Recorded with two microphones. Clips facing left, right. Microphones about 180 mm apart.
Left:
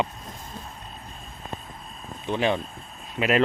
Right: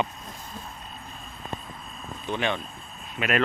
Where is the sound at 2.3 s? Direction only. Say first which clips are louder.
Left 4 dB; 35° left (ahead or behind).